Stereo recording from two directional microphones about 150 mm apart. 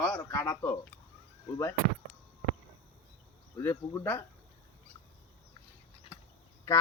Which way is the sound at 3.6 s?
15° left (ahead or behind).